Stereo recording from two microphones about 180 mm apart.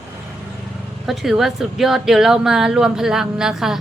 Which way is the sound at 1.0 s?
Centre (ahead or behind).